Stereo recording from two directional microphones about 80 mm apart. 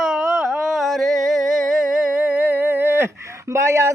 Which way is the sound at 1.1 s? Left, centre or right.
Centre.